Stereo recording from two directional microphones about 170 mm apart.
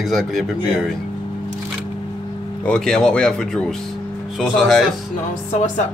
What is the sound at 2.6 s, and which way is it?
Speech, 5° left (ahead or behind).